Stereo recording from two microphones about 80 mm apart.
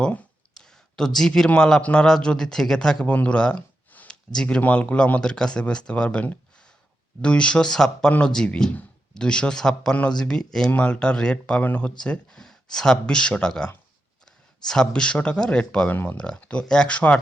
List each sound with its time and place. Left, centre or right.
0.5 s a sound: centre
1.5 s a man's voice: centre
15.9 s speech: left
16.1 s a man's voice: centre